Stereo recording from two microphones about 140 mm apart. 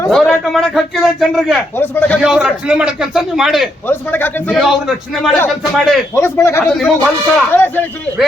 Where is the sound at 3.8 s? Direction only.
15° left (ahead or behind).